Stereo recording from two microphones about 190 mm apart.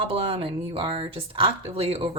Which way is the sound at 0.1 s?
30° right (ahead or behind).